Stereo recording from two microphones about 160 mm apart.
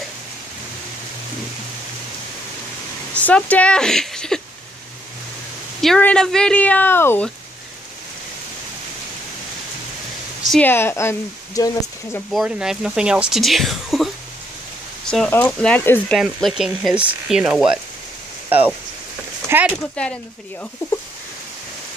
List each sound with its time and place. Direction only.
3.2 s speech: 10° left (ahead or behind)
5.8 s speech: 5° left (ahead or behind)
10.4 s a sound: centre (ahead or behind)
10.7 s speech: 15° left (ahead or behind)
12.3 s speech: 5° right (ahead or behind)
19.4 s a sound: 10° right (ahead or behind)
20.0 s speech: 5° left (ahead or behind)